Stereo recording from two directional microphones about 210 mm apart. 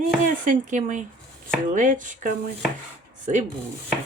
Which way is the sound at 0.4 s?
35° right (ahead or behind).